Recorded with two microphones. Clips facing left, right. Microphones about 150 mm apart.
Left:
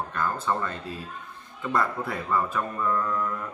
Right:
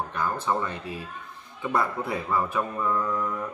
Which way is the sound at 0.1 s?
10° right (ahead or behind).